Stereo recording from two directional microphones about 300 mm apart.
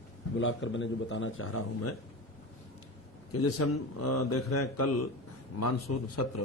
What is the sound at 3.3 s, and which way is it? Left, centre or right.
A man's voice, left.